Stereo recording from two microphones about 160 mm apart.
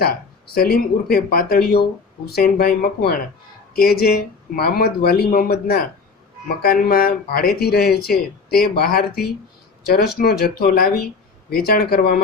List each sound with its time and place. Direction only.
0.0 s speech: 70° left (ahead or behind)